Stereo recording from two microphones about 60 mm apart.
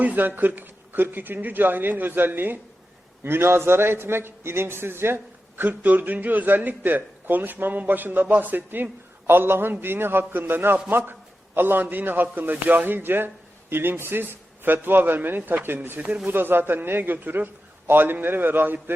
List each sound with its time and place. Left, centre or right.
0.0 s a man's voice: right